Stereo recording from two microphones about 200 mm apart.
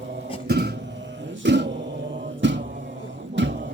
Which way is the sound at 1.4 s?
60° right (ahead or behind).